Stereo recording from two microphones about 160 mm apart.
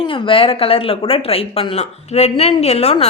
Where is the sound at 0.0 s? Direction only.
35° left (ahead or behind).